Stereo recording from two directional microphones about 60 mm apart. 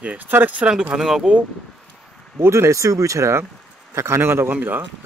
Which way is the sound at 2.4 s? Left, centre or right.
Right.